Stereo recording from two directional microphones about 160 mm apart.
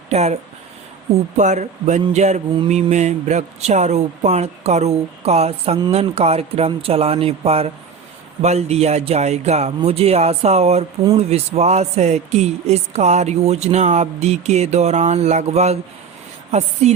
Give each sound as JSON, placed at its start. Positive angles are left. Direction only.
{"t": 0.1, "sound": "speech", "side_deg": -40}
{"t": 1.4, "sound": "speech", "side_deg": -45}